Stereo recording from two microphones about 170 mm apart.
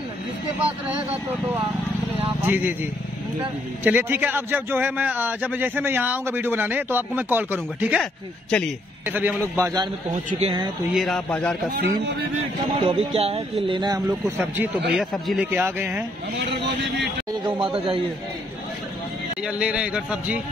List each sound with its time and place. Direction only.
2.2 s speech: 10° right (ahead or behind)
3.8 s a man's voice: 10° right (ahead or behind)
8.5 s a man's voice: 5° left (ahead or behind)
9.1 s a man's voice: 10° right (ahead or behind)
10.4 s speech: 30° right (ahead or behind)
11.0 s a man's voice: 5° left (ahead or behind)
11.7 s speech: 85° right
12.7 s speech: 35° right (ahead or behind); by 14.7 s 15° right (ahead or behind)
15.0 s a man's voice: 5° right (ahead or behind)
17.5 s speech: 30° right (ahead or behind)
19.4 s a man's voice: 5° right (ahead or behind)